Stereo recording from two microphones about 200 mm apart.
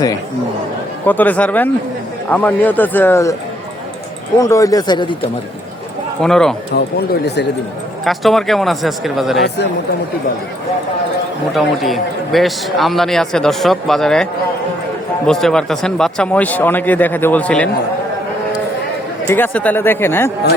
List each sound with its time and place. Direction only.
1.0 s a man's voice: 10° left (ahead or behind)
4.4 s speech: 15° left (ahead or behind)
6.2 s a man's voice: centre (ahead or behind)
6.7 s speech: 55° left (ahead or behind)
8.0 s a man's voice: centre (ahead or behind)
11.5 s a man's voice: centre (ahead or behind)
15.3 s a man's voice: centre (ahead or behind)
19.3 s a man's voice: 10° left (ahead or behind)